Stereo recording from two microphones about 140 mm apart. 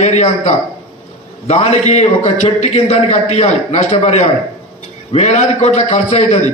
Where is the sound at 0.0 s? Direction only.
55° left (ahead or behind).